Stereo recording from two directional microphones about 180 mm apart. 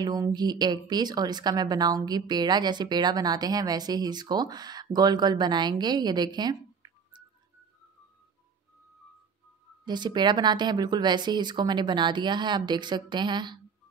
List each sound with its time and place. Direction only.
0.0 s speech: 20° right (ahead or behind)
9.8 s speech: 25° right (ahead or behind)